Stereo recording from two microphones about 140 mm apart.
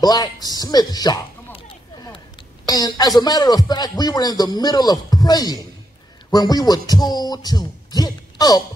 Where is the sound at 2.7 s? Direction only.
30° left (ahead or behind).